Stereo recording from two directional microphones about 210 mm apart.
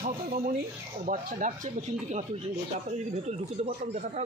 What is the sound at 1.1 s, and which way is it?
Speech, 40° right (ahead or behind).